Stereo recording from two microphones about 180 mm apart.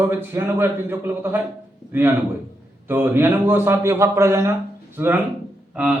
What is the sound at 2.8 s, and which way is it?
A man's voice, 10° right (ahead or behind).